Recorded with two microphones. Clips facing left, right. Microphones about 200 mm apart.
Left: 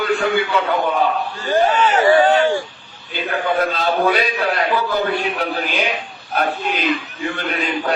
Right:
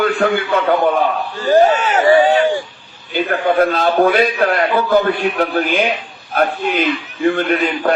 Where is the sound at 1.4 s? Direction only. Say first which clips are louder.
Right 5 dB; 40° right (ahead or behind).